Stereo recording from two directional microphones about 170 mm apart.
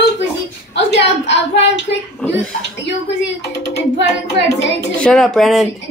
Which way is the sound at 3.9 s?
90° left.